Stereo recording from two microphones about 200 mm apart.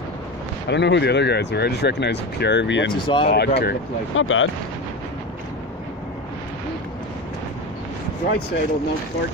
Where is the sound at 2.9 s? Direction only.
25° left (ahead or behind).